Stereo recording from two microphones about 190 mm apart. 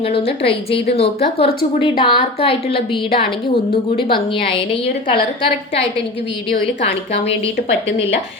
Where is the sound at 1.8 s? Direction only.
25° left (ahead or behind).